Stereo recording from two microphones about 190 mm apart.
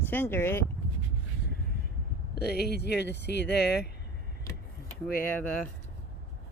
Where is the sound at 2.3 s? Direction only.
55° left (ahead or behind).